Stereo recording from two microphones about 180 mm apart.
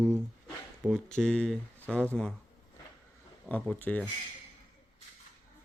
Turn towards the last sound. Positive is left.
turn(degrees=5)  # may be behind; listen again after turning